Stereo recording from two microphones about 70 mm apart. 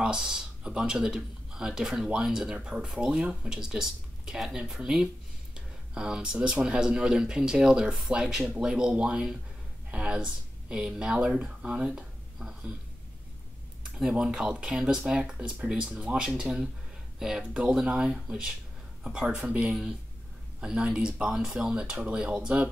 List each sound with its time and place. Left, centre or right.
0.0 s speech: centre
13.9 s speech: centre